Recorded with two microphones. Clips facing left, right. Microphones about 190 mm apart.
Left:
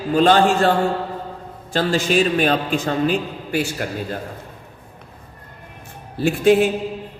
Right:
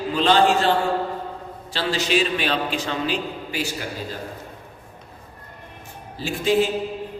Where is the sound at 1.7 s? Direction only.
50° left (ahead or behind).